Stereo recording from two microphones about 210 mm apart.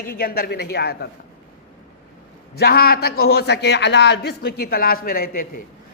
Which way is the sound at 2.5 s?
45° left (ahead or behind).